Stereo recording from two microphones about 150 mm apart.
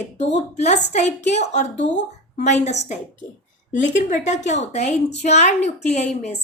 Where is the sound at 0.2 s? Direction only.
50° left (ahead or behind).